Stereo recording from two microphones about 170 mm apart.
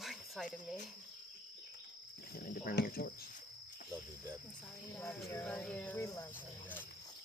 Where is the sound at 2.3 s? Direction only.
60° left (ahead or behind).